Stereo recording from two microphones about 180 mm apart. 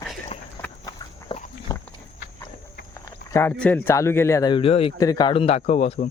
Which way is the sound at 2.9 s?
15° left (ahead or behind).